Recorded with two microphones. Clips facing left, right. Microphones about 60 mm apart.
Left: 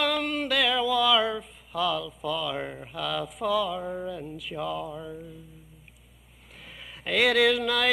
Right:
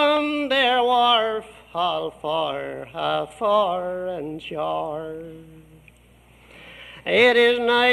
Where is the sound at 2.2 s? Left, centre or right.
Centre.